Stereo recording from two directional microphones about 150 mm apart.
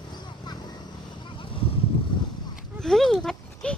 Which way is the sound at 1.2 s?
35° left (ahead or behind).